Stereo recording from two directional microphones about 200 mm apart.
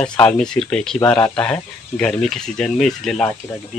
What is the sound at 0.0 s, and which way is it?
Speech, 5° left (ahead or behind).